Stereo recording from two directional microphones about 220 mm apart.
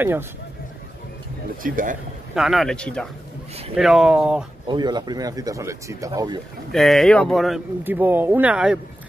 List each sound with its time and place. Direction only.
1.6 s speech: 40° right (ahead or behind)
2.3 s speech: centre (ahead or behind)
4.6 s speech: 20° right (ahead or behind)
6.7 s speech: centre (ahead or behind)